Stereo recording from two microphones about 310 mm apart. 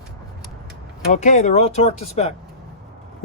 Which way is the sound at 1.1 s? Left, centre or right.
Left.